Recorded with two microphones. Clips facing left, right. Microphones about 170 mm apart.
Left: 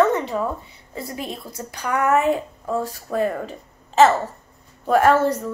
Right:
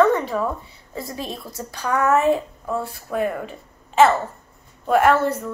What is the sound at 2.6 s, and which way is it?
A woman's voice, 40° left (ahead or behind).